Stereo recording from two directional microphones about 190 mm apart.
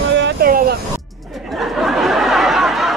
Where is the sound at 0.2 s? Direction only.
50° right (ahead or behind).